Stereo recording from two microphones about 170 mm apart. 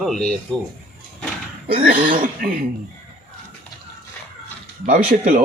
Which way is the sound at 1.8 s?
55° right (ahead or behind).